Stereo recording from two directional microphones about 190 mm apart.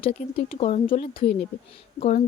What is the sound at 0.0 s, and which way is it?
Speech, 30° left (ahead or behind).